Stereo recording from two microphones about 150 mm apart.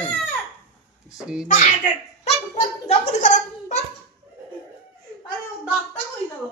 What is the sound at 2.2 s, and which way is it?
A child's voice, 45° left (ahead or behind).